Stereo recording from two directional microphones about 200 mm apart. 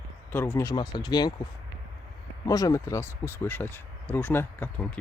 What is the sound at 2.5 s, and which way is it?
Speech, 15° left (ahead or behind).